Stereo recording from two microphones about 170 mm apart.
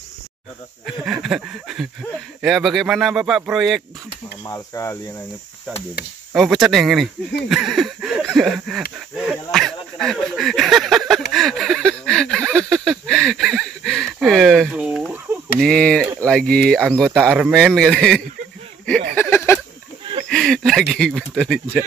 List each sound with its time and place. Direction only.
0.8 s speech: centre (ahead or behind)
4.5 s speech: 15° left (ahead or behind)
6.3 s speech: centre (ahead or behind)
9.2 s a sound: centre (ahead or behind)
15.6 s speech: 5° left (ahead or behind)
16.8 s speech: 5° right (ahead or behind)
19.1 s a sound: 15° left (ahead or behind)
20.2 s speech: 5° left (ahead or behind)